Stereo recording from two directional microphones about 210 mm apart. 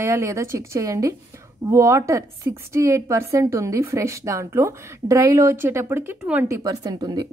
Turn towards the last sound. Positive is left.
turn(degrees=-20)  # may be behind; listen again after turning